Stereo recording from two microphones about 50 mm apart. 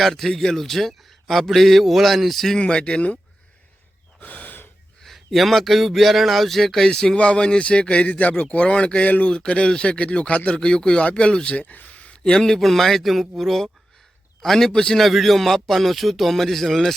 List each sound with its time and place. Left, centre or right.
0.0 s a man's voice: centre
2.6 s speech: centre
4.2 s gasp: left
5.0 s speech: centre; by 9.3 s left
9.3 s speech: centre
11.5 s a sound: left
12.3 s a man's voice: centre
15.0 s a man's voice: centre